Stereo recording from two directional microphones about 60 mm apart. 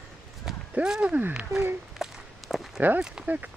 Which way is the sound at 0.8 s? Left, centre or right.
Centre.